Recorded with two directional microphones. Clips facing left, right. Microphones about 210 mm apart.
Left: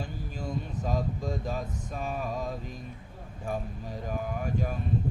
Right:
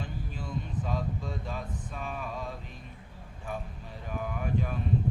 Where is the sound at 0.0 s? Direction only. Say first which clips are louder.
Left 2 dB; 40° left (ahead or behind).